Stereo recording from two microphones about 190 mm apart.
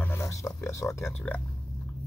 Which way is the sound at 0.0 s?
15° left (ahead or behind).